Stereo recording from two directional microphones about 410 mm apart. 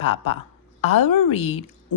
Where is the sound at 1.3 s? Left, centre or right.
Centre.